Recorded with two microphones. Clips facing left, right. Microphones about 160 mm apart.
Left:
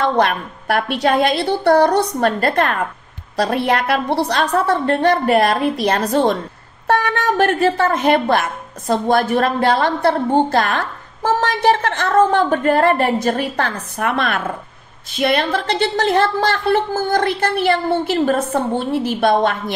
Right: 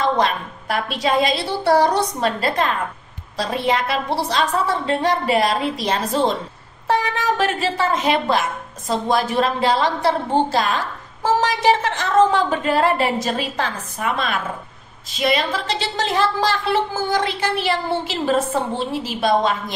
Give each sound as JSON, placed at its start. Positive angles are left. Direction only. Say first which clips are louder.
{"t": 0.0, "sound": "a woman's voice", "louder": "left 3 dB", "side_deg": 60}